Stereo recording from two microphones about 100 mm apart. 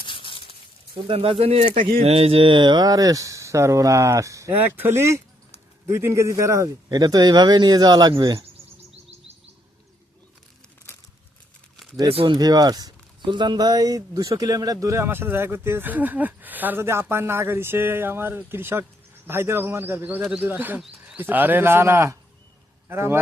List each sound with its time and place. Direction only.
0.0 s a sound: 60° left (ahead or behind)
1.0 s speech: 70° right (ahead or behind); by 4.5 s 30° right (ahead or behind)
4.5 s speech: 20° right (ahead or behind); by 8.4 s 45° right (ahead or behind)
12.0 s speech: 75° right (ahead or behind)
12.3 s a man's voice: 40° right (ahead or behind); by 23.1 s 25° right (ahead or behind)